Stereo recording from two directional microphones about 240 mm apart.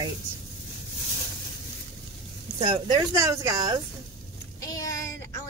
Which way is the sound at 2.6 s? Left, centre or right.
Centre.